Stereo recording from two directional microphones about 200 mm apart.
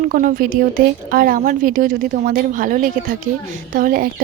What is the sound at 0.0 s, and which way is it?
Speech, 40° right (ahead or behind).